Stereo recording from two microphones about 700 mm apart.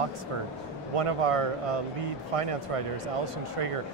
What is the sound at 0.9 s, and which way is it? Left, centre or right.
Speech, right.